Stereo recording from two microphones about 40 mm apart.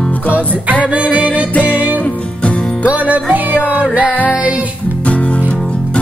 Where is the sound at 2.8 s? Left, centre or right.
Right.